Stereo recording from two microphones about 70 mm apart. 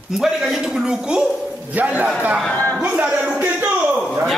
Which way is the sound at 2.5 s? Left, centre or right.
Left.